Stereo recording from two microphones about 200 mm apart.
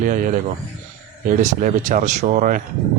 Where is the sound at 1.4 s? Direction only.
40° right (ahead or behind).